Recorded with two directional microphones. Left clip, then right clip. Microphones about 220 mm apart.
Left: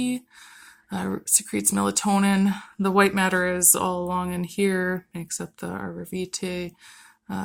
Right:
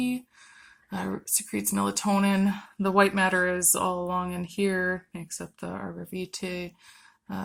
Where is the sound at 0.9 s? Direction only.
45° left (ahead or behind).